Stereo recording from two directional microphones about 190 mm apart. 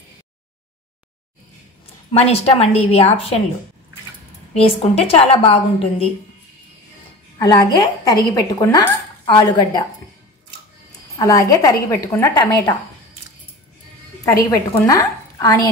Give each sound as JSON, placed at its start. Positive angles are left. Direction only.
{"t": 2.1, "sound": "a woman's voice", "side_deg": 30}
{"t": 4.6, "sound": "a woman's voice", "side_deg": 30}
{"t": 7.3, "sound": "speech", "side_deg": 20}
{"t": 11.1, "sound": "a woman's voice", "side_deg": 15}
{"t": 14.9, "sound": "a woman's voice", "side_deg": 15}